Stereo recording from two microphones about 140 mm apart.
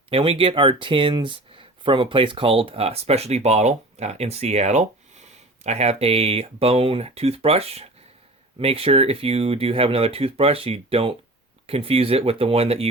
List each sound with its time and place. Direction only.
0.1 s speech: 40° right (ahead or behind)